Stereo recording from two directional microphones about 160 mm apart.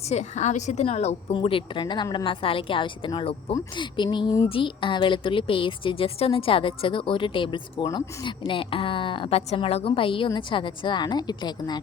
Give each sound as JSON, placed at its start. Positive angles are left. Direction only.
{"t": 0.1, "sound": "a woman's voice", "side_deg": 45}